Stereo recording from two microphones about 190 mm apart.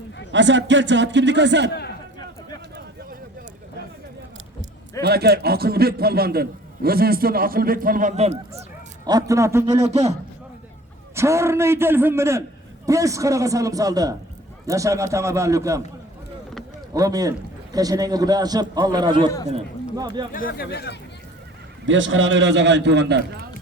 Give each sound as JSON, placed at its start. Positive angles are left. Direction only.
{"t": 0.3, "sound": "a man's voice", "side_deg": -70}
{"t": 1.7, "sound": "a sound", "side_deg": 60}
{"t": 5.0, "sound": "a man's voice", "side_deg": -55}
{"t": 9.0, "sound": "a man's voice", "side_deg": -20}
{"t": 9.8, "sound": "a man's voice", "side_deg": -35}
{"t": 11.1, "sound": "a man's voice", "side_deg": -15}
{"t": 16.9, "sound": "a man's voice", "side_deg": -20}
{"t": 20.3, "sound": "speech", "side_deg": 50}
{"t": 21.8, "sound": "a man's voice", "side_deg": -85}